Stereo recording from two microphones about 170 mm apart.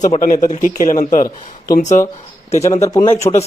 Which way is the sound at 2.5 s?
40° left (ahead or behind).